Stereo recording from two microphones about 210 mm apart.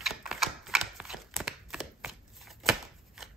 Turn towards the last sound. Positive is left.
turn(degrees=0)  # may be behind; listen again after turning